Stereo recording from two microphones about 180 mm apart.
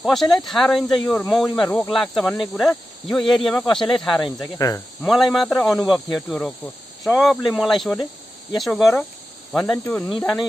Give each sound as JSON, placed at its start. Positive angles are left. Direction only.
{"t": 0.0, "sound": "speech", "side_deg": 0}
{"t": 4.6, "sound": "cricket", "side_deg": 20}
{"t": 5.0, "sound": "speech", "side_deg": 0}